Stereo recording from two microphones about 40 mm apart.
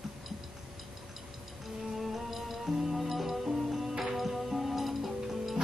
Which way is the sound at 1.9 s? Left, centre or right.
Centre.